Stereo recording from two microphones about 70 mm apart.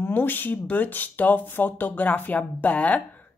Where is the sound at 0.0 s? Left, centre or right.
Left.